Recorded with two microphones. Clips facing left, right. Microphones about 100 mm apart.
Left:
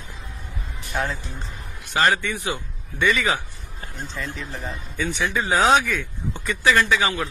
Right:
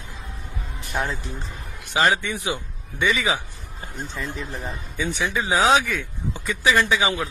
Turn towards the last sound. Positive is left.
turn(degrees=-10)  # may be behind; listen again after turning